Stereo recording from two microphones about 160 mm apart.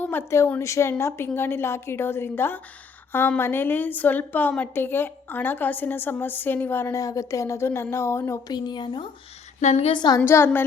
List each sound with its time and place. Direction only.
0.0 s a woman's voice: 10° left (ahead or behind); by 9.0 s 30° left (ahead or behind)
9.6 s a woman's voice: 45° left (ahead or behind)
9.9 s a woman's voice: 30° left (ahead or behind)
10.2 s a woman's voice: 15° left (ahead or behind)